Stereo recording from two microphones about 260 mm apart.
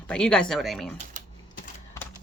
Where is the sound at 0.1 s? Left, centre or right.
Centre.